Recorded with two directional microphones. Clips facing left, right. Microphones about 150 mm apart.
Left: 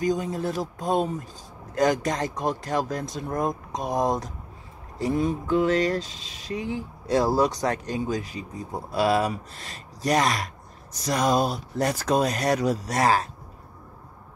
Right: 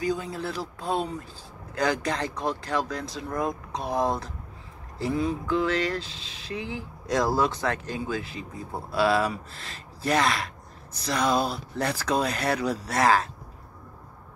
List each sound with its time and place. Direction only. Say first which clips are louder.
0.0 s speech: left 3 dB; 45° left (ahead or behind)
7.6 s speech: left 3 dB; 40° left (ahead or behind)
8.2 s speech: left 2 dB; 15° left (ahead or behind)
8.9 s speech: left 1 dB; 40° left (ahead or behind)